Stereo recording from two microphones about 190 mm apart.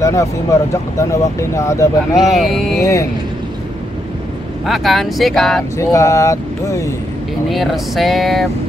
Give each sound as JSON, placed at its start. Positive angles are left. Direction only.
{"t": 0.0, "sound": "speech", "side_deg": 15}
{"t": 2.2, "sound": "speech", "side_deg": 0}
{"t": 2.8, "sound": "speech", "side_deg": 15}
{"t": 4.6, "sound": "speech", "side_deg": 0}
{"t": 5.8, "sound": "speech", "side_deg": 15}
{"t": 7.4, "sound": "speech", "side_deg": 0}